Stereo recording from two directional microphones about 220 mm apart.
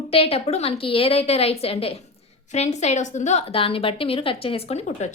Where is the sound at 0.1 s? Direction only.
25° left (ahead or behind).